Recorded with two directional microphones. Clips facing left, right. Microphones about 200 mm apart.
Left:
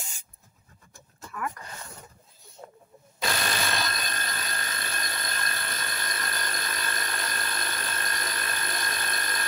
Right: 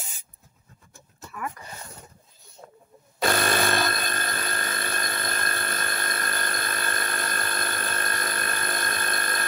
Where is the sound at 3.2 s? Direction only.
55° right (ahead or behind).